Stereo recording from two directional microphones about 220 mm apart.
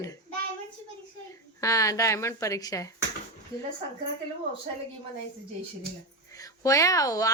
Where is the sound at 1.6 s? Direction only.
15° left (ahead or behind).